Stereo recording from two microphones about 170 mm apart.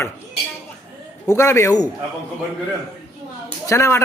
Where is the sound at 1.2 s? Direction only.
15° left (ahead or behind).